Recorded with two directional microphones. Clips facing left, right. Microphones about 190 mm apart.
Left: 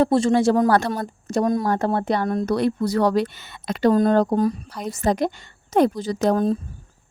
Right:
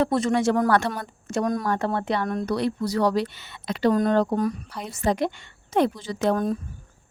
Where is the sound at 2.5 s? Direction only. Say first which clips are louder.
Left 4 dB; 50° left (ahead or behind).